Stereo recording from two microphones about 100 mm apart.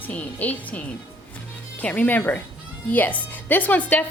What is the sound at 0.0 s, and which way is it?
A woman's voice, 15° left (ahead or behind).